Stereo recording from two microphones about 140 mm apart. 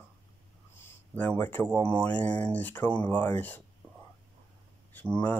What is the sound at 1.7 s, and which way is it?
Speech, 15° left (ahead or behind).